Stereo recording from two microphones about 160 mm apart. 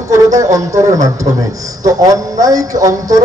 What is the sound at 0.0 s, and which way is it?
Speech, 20° right (ahead or behind).